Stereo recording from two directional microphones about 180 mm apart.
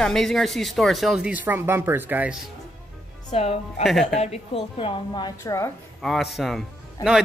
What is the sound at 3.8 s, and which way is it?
Speech, centre (ahead or behind).